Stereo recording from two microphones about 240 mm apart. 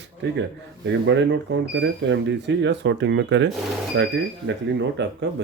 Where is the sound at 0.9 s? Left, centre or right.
Right.